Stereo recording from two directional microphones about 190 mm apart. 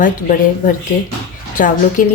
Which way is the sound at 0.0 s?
45° left (ahead or behind).